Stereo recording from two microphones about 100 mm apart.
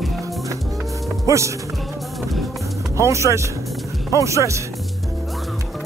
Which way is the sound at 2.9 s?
30° right (ahead or behind).